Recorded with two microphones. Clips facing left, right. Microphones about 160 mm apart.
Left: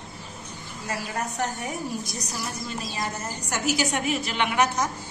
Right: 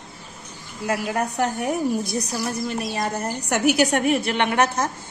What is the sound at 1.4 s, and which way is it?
A woman's voice, 60° right (ahead or behind).